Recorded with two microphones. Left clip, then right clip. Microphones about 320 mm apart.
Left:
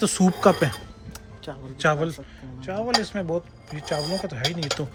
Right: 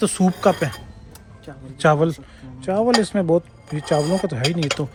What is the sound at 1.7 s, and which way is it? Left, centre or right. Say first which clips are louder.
Speech: right 6 dB; centre.